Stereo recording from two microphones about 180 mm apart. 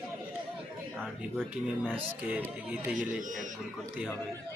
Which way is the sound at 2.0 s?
10° right (ahead or behind).